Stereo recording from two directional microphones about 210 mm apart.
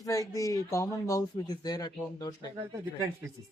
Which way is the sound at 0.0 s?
15° left (ahead or behind).